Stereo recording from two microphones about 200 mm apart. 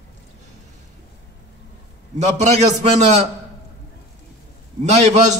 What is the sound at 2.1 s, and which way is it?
A man's voice, 35° right (ahead or behind).